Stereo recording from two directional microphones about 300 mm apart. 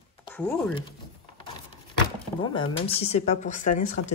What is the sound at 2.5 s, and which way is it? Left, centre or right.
Speech, centre.